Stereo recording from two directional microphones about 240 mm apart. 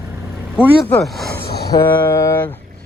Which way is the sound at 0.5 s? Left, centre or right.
Centre.